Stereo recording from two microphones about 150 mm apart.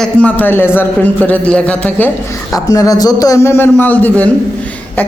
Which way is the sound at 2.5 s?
25° left (ahead or behind).